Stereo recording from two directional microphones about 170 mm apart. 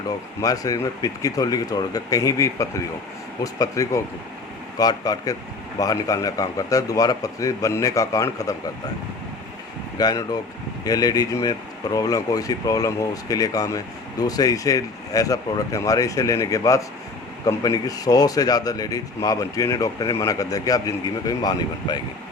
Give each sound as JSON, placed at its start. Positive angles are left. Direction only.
{"t": 0.4, "sound": "speech", "side_deg": 20}
{"t": 10.0, "sound": "speech", "side_deg": 20}